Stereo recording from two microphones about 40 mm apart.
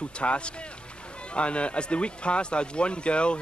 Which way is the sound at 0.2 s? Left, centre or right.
Left.